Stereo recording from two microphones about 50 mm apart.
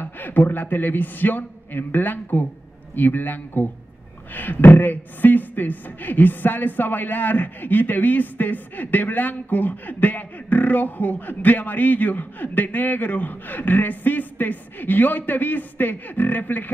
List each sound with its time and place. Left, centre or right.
0.0 s speech: left